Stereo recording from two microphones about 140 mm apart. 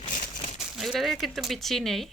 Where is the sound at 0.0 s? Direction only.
60° left (ahead or behind).